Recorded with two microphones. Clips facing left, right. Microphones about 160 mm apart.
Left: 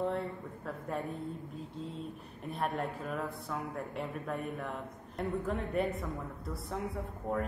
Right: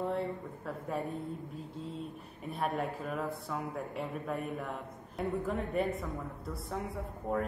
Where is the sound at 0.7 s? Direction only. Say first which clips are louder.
Right 1 dB; centre (ahead or behind).